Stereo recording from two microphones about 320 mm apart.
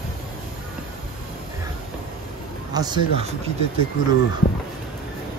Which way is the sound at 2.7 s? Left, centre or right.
Centre.